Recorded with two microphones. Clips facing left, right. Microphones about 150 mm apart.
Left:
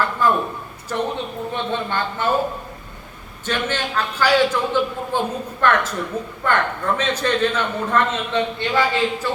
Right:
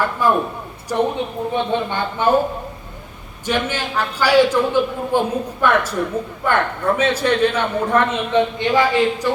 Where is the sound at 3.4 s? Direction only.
10° right (ahead or behind).